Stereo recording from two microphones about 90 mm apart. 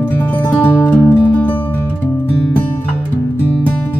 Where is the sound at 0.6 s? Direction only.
20° left (ahead or behind).